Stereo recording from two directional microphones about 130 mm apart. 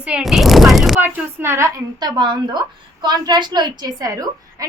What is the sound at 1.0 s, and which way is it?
Speech, 20° right (ahead or behind).